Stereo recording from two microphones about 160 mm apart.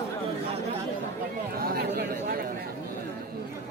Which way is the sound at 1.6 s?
70° right (ahead or behind).